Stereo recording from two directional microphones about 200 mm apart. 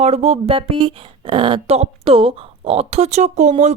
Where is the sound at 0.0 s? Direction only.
30° right (ahead or behind).